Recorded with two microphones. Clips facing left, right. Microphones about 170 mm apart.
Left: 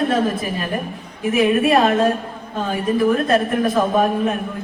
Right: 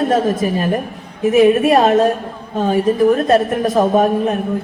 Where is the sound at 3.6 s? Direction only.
40° right (ahead or behind).